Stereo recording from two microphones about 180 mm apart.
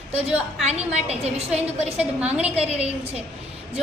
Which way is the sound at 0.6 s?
35° right (ahead or behind).